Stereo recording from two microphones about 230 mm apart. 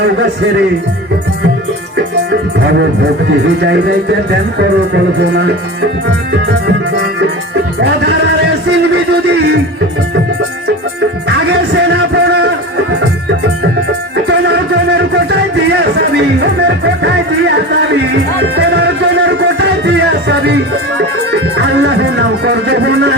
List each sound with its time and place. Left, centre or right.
3.6 s speech: right
9.2 s music: right
11.3 s music: right
15.7 s music: right
21.6 s music: right